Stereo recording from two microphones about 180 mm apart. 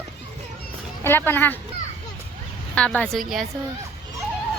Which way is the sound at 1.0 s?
10° left (ahead or behind).